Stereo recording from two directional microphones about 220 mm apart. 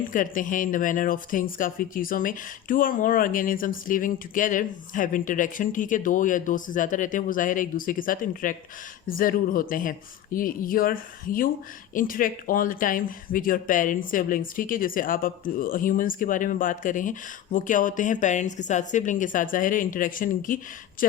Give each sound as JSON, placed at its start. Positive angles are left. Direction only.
{"t": 0.1, "sound": "a woman's voice", "side_deg": 35}